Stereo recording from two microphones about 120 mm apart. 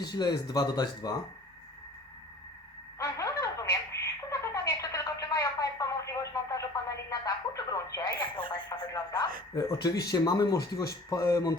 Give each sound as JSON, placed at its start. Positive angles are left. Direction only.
{"t": 0.0, "sound": "speech", "side_deg": 35}
{"t": 3.0, "sound": "a sound", "side_deg": 25}
{"t": 8.7, "sound": "a man's voice", "side_deg": 35}